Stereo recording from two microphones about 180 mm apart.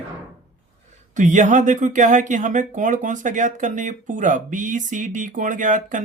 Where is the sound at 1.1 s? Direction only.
45° right (ahead or behind).